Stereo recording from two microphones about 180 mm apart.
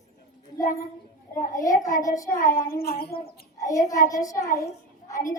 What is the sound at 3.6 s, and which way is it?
Child singing, 20° left (ahead or behind).